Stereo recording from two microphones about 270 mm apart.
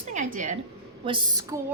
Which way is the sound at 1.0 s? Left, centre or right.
Centre.